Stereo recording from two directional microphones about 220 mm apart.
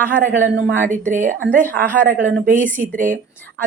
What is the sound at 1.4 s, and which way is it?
Speech, 10° left (ahead or behind).